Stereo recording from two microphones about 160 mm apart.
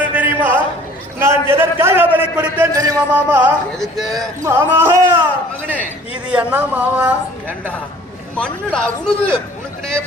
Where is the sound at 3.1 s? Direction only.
10° right (ahead or behind).